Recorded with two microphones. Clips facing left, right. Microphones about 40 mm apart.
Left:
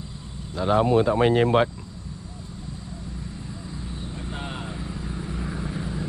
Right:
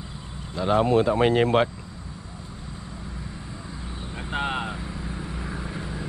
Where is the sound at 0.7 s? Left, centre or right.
Centre.